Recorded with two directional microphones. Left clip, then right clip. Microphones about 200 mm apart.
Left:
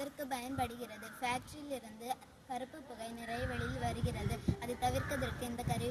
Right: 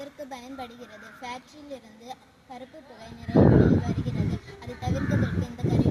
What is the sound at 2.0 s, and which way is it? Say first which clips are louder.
Speech: even; 10° left (ahead or behind).